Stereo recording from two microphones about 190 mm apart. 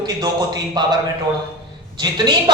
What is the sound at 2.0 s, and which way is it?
Speech, 20° right (ahead or behind).